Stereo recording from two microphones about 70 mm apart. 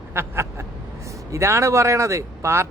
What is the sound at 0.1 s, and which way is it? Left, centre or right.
Speech, right.